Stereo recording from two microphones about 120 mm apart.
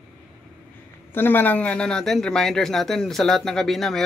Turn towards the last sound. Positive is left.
turn(degrees=0)  # may be behind; listen again after turning